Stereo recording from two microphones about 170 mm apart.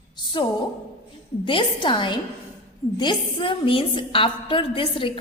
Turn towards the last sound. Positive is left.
turn(degrees=30)  # may be behind; listen again after turning